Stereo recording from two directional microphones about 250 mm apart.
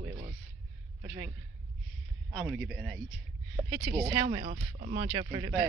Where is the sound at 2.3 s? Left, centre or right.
Centre.